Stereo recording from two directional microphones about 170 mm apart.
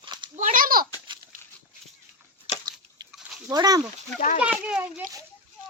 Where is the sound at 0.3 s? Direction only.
50° right (ahead or behind).